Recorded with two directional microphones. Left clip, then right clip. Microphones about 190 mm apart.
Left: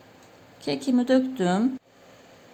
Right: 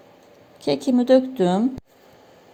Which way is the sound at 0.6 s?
15° right (ahead or behind).